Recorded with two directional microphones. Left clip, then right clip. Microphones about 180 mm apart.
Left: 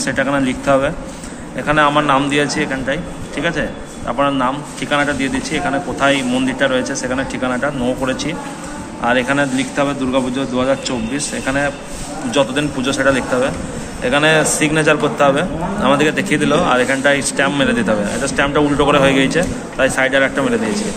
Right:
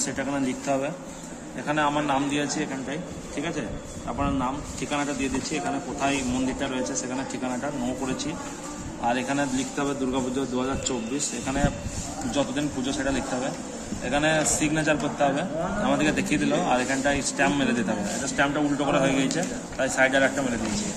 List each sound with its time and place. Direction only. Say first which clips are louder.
0.0 s a man's voice: left 11 dB; centre (ahead or behind)